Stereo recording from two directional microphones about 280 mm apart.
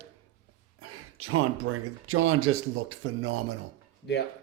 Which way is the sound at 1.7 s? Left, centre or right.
Right.